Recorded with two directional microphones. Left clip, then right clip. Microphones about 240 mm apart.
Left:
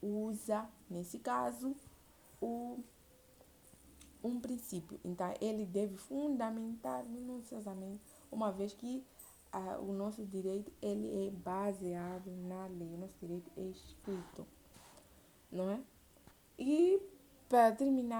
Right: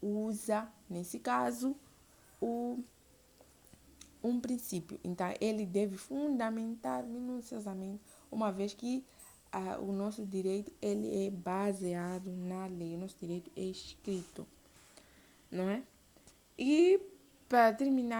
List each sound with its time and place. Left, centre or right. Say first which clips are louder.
0.2 s speech: right 3 dB; right
4.2 s a woman's voice: right 5 dB; right
11.4 s speech: right 3 dB; right
13.6 s a woman's voice: right 5 dB; right
15.5 s a woman's voice: right 3 dB; centre
17.5 s a woman's voice: right 2 dB; centre